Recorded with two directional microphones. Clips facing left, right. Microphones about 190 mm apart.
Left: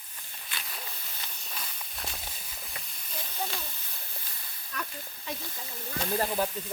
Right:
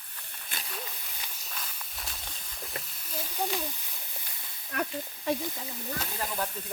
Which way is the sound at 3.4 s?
15° right (ahead or behind).